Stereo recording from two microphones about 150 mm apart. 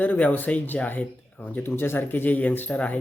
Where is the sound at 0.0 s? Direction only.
10° left (ahead or behind).